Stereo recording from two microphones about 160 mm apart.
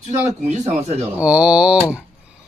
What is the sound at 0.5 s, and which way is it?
Speech, 45° right (ahead or behind).